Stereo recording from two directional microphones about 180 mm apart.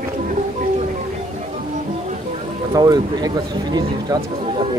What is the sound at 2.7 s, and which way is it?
Speech, 20° right (ahead or behind).